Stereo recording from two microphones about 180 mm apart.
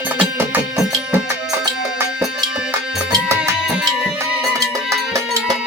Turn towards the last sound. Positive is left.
turn(degrees=-20)  # may be behind; listen again after turning